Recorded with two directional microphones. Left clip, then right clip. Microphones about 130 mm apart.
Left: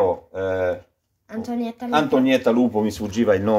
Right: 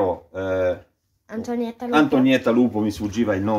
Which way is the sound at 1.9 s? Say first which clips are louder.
Even; 45° left (ahead or behind).